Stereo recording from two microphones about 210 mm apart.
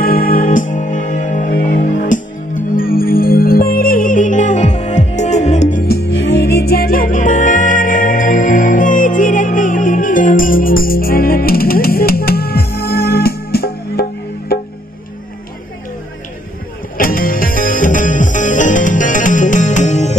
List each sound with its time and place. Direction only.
0.0 s music: 45° left (ahead or behind)
16.9 s music: 40° left (ahead or behind)